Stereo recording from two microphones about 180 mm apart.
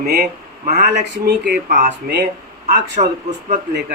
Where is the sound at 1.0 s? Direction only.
70° right (ahead or behind).